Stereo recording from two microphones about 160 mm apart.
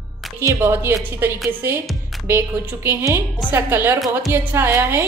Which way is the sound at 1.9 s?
Centre (ahead or behind).